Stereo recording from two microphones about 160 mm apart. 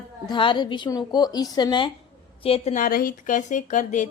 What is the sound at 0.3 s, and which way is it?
A woman's voice, 30° left (ahead or behind).